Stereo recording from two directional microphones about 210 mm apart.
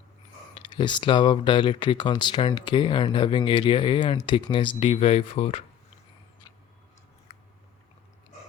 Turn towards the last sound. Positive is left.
turn(degrees=30)  # may be behind; listen again after turning